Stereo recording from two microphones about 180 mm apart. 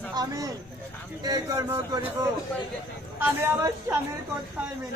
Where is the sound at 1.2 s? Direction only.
20° right (ahead or behind).